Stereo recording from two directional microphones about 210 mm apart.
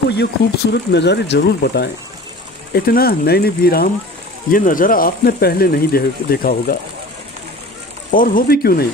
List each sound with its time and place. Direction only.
0.1 s speech: 55° left (ahead or behind)
8.1 s speech: 40° left (ahead or behind)